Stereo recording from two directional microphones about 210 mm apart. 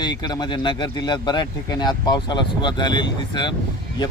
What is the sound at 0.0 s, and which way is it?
Speech, 20° left (ahead or behind).